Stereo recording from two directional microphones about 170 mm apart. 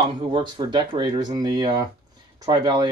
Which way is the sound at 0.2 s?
30° right (ahead or behind).